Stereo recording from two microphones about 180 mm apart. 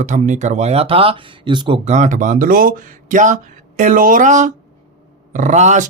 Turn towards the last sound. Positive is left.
turn(degrees=-40)  # may be behind; listen again after turning